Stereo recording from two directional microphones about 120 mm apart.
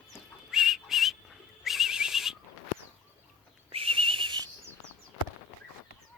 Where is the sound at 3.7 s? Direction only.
50° right (ahead or behind).